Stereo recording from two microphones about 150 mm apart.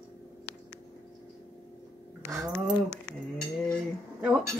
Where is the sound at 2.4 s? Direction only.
Centre (ahead or behind).